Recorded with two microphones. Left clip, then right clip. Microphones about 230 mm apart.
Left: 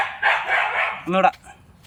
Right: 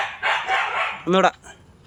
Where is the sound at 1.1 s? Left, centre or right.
Centre.